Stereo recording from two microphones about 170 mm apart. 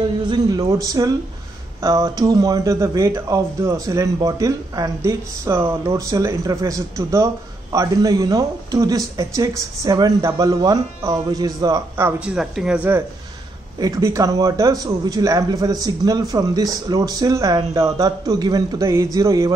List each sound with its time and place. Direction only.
0.3 s a man's voice: 20° right (ahead or behind)
12.4 s speech: 5° right (ahead or behind)
13.7 s a man's voice: 20° right (ahead or behind)